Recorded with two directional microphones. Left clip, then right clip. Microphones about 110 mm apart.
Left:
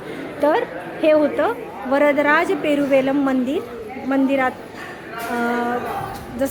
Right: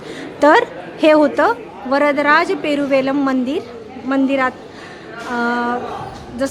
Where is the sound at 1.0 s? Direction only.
90° right.